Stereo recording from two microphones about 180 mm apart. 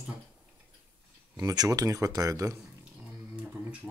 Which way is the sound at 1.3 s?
20° right (ahead or behind).